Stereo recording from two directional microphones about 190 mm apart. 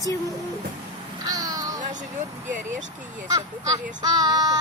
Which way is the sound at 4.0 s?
20° right (ahead or behind).